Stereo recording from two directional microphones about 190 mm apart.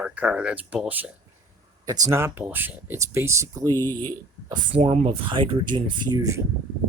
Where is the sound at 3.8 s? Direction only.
10° left (ahead or behind).